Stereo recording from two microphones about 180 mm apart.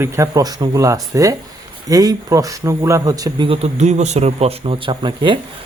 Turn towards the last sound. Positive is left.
turn(degrees=-25)  # may be behind; listen again after turning